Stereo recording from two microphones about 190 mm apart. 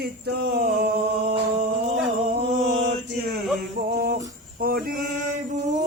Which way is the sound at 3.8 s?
55° right (ahead or behind).